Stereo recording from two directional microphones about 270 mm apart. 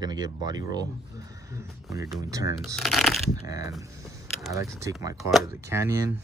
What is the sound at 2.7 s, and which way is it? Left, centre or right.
Speech, centre.